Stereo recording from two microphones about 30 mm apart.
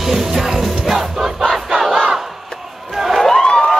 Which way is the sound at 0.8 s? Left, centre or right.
Centre.